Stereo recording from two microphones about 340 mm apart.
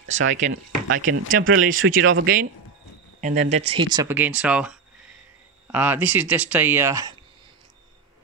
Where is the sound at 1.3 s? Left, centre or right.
Right; by 7.2 s centre.